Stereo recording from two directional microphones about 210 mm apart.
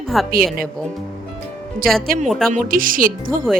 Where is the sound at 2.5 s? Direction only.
40° right (ahead or behind).